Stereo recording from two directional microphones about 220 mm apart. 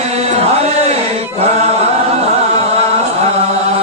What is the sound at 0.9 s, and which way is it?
Chant, 30° right (ahead or behind).